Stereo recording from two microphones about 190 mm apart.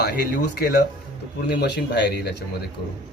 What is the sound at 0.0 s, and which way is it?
Speech, 55° left (ahead or behind).